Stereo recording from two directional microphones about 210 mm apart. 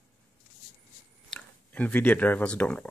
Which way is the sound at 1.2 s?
5° left (ahead or behind).